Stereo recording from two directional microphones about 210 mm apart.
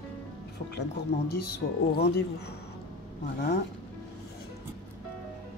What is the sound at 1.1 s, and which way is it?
Speech, 55° left (ahead or behind).